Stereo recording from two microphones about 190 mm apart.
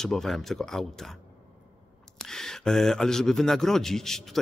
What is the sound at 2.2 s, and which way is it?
Speech, centre (ahead or behind).